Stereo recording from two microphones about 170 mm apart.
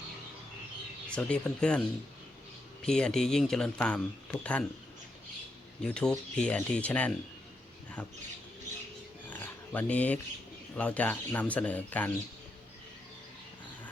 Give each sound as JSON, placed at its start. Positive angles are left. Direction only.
{"t": 1.1, "sound": "speech", "side_deg": 5}
{"t": 2.8, "sound": "speech", "side_deg": 5}
{"t": 5.8, "sound": "speech", "side_deg": 5}
{"t": 9.3, "sound": "a sound", "side_deg": 10}
{"t": 10.8, "sound": "speech", "side_deg": 10}